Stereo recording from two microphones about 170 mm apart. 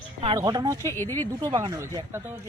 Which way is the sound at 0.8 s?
15° left (ahead or behind).